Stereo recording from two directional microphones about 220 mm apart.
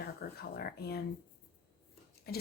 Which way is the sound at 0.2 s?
45° left (ahead or behind).